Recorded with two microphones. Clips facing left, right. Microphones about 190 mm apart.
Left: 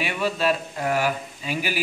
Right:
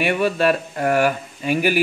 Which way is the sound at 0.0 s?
55° right (ahead or behind).